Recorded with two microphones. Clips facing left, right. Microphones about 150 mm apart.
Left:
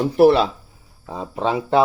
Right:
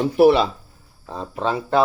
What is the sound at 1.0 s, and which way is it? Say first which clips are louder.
Speech: left 1 dB; 10° left (ahead or behind).